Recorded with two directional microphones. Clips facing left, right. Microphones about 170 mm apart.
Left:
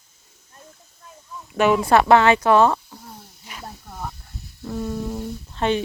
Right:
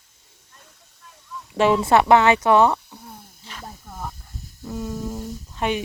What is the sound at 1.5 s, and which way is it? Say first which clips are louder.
Speech: even; 30° right (ahead or behind).